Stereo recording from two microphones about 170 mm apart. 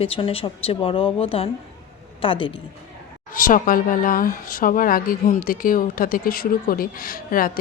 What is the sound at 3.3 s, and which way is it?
Speech, 50° left (ahead or behind).